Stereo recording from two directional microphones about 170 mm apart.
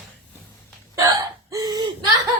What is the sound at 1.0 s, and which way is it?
Hiccup, 20° right (ahead or behind).